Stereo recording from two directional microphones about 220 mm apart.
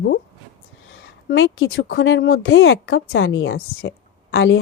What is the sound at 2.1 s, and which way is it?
Speech, 60° left (ahead or behind).